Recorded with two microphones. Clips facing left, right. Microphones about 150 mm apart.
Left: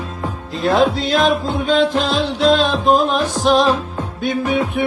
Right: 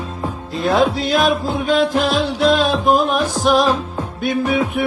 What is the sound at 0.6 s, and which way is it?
Music, centre (ahead or behind).